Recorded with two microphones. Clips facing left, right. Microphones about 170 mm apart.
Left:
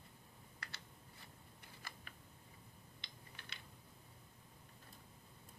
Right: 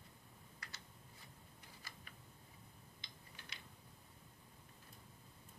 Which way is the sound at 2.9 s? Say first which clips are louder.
Left 1 dB; 65° left (ahead or behind).